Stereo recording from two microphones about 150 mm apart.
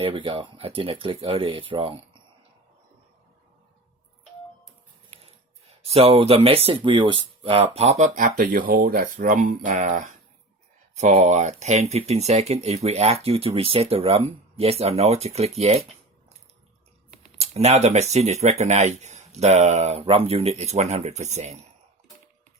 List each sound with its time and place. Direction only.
0.0 s speech: 35° right (ahead or behind)
5.2 s speech: 40° right (ahead or behind)
17.3 s speech: 45° right (ahead or behind)